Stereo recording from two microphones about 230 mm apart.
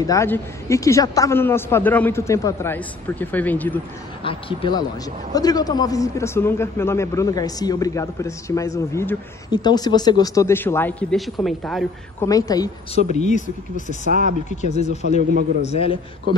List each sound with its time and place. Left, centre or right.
0.0 s speech: centre
4.2 s a man's voice: left; by 11.8 s centre
12.2 s speech: centre
13.1 s speech: left
14.0 s speech: right
14.6 s a man's voice: left